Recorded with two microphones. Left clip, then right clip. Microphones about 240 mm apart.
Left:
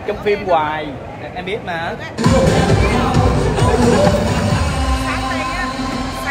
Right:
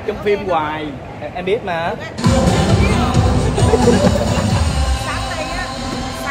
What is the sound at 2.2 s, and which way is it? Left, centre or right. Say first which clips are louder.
Music: left 2 dB; left.